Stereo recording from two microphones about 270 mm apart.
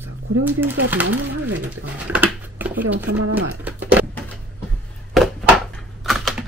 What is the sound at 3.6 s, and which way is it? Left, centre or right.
Speech, centre.